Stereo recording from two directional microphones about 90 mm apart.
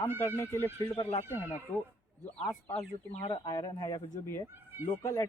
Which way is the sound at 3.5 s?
40° left (ahead or behind).